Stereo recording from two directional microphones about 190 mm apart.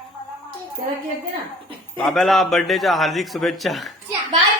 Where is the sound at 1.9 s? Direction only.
Centre (ahead or behind).